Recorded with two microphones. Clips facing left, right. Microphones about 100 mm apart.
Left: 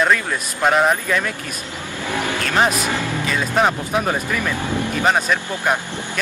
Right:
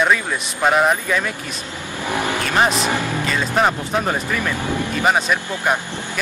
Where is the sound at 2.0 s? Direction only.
15° right (ahead or behind).